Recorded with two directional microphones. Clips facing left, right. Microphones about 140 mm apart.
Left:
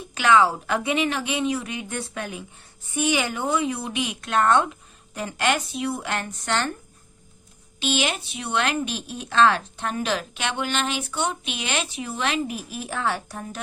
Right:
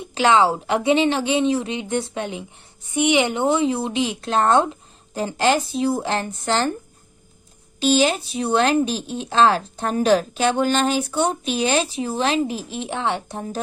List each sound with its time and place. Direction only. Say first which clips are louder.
0.0 s speech: right 2 dB; 25° right (ahead or behind)
7.8 s speech: right 7 dB; 35° right (ahead or behind)